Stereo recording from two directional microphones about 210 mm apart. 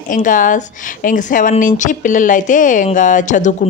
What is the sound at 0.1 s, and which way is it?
A woman's voice, 40° left (ahead or behind).